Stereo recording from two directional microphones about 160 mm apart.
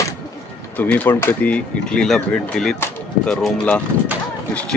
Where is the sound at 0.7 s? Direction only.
10° left (ahead or behind).